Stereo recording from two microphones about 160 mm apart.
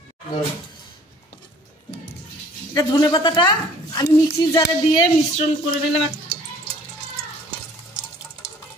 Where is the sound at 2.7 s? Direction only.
25° left (ahead or behind).